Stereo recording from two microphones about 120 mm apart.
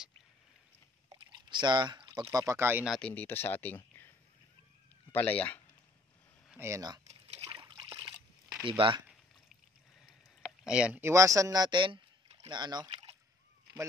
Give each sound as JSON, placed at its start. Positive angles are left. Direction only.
{"t": 1.1, "sound": "pour", "side_deg": -40}
{"t": 2.3, "sound": "speech", "side_deg": -25}
{"t": 3.0, "sound": "speech", "side_deg": 10}
{"t": 5.1, "sound": "speech", "side_deg": 10}
{"t": 6.6, "sound": "speech", "side_deg": -30}
{"t": 7.1, "sound": "a sound", "side_deg": -60}
{"t": 7.5, "sound": "trickle", "side_deg": -40}
{"t": 8.6, "sound": "speech", "side_deg": -45}
{"t": 10.0, "sound": "rowboat", "side_deg": -5}
{"t": 11.0, "sound": "speech", "side_deg": -25}